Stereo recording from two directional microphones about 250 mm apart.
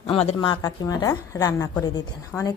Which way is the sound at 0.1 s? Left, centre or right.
Left.